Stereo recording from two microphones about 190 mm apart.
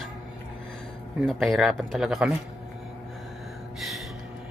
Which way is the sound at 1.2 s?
Centre (ahead or behind).